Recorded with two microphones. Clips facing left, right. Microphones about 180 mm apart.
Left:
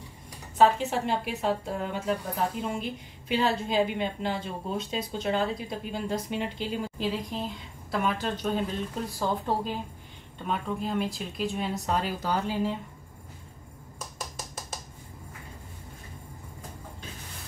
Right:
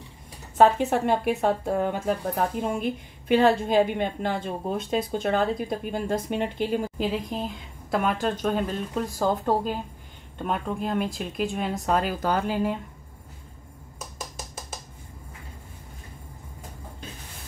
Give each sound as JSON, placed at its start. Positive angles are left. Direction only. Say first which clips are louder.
{"t": 0.6, "sound": "a woman's voice", "louder": "right 3 dB", "side_deg": -55}